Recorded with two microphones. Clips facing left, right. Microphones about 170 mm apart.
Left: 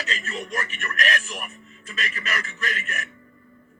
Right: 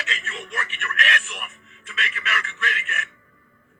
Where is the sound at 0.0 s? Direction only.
40° left (ahead or behind).